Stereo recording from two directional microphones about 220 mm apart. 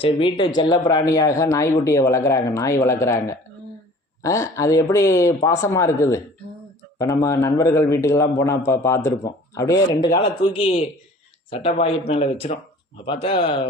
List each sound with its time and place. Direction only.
0.0 s a man's voice: 25° left (ahead or behind)